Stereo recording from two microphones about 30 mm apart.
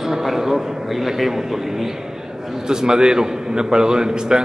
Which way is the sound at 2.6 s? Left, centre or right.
Right.